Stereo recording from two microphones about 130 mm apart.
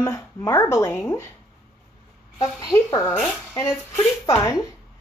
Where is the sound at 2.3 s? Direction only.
25° left (ahead or behind).